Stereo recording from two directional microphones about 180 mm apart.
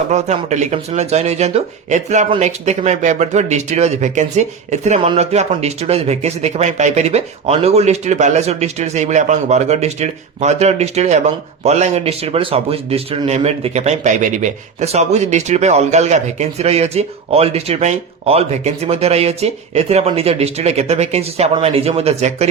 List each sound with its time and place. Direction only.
0.1 s speech: 40° right (ahead or behind)